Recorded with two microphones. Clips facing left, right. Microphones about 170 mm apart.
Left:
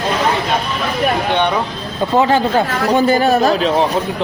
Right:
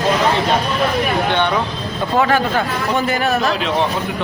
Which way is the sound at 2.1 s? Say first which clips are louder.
Left 3 dB; 25° left (ahead or behind).